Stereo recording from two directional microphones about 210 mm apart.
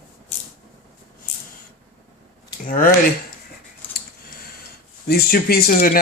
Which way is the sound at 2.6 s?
45° left (ahead or behind).